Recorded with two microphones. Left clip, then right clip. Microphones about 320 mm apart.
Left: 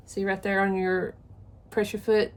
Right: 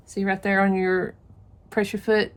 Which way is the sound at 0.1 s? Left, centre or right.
Right.